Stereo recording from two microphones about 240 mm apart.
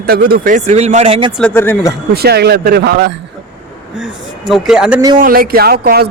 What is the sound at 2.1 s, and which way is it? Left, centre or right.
Speech, right.